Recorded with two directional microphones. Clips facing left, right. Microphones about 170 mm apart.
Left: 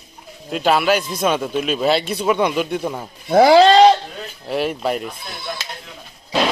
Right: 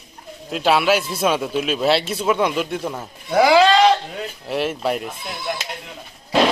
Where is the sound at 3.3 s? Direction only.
35° left (ahead or behind).